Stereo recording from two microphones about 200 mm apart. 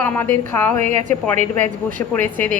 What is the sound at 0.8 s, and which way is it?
Speech, 35° right (ahead or behind).